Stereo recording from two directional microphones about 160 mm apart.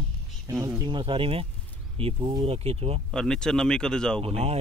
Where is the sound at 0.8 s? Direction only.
30° right (ahead or behind).